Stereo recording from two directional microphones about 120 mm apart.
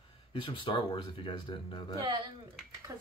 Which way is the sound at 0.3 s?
45° left (ahead or behind).